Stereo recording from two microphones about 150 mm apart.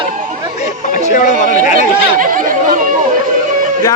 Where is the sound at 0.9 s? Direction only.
60° left (ahead or behind).